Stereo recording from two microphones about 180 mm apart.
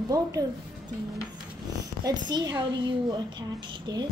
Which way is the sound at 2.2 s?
25° right (ahead or behind).